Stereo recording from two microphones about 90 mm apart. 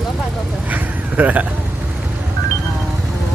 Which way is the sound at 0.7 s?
20° right (ahead or behind).